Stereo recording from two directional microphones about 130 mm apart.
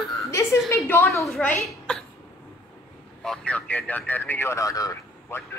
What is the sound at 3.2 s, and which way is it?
A woman's voice, 5° left (ahead or behind).